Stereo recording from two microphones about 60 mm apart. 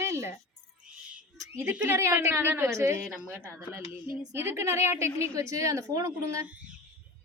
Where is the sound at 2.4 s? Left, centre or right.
Right.